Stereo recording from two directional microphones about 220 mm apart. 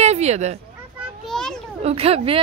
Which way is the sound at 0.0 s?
30° right (ahead or behind).